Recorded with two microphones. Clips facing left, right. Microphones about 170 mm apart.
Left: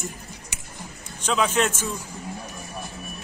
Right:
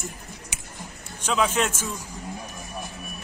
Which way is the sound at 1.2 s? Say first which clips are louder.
Left 1 dB; 5° right (ahead or behind).